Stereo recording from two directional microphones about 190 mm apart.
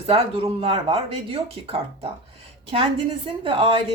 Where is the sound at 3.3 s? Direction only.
30° right (ahead or behind).